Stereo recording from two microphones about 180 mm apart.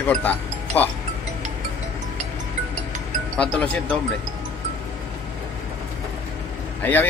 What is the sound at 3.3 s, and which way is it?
Speech, 5° left (ahead or behind).